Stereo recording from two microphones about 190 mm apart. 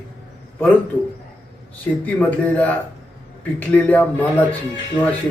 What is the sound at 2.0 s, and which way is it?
Speech, 10° left (ahead or behind).